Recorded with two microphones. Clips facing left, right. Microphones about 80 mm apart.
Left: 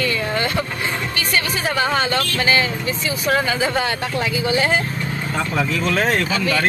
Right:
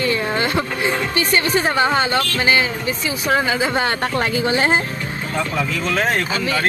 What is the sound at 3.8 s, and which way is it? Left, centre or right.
Speech, right.